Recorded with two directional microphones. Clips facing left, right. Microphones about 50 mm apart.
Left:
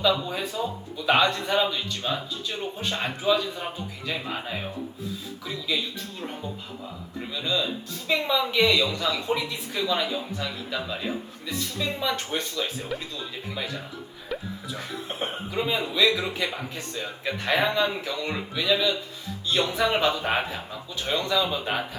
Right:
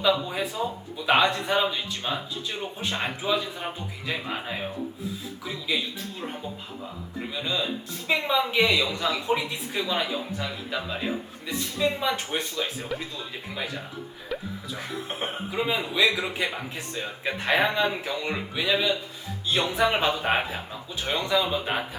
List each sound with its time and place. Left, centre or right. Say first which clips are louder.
0.0 s a man's voice: even; centre
7.3 s a man's voice: left 2 dB; centre
12.9 s speech: even; centre
14.3 s a man's voice: even; centre